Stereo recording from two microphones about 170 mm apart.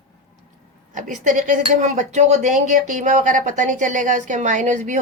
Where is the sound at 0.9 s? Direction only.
50° right (ahead or behind).